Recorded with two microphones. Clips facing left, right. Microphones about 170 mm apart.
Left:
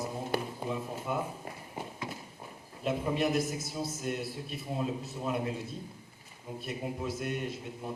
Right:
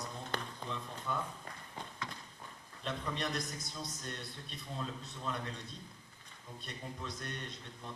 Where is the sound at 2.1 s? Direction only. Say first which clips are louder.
Left 6 dB; 20° left (ahead or behind).